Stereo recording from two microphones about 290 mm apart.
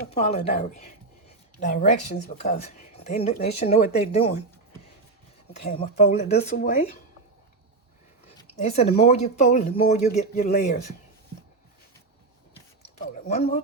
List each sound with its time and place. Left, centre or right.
0.1 s speech: left
5.5 s speech: left
8.4 s a sound: left
9.0 s speech: left
13.2 s speech: left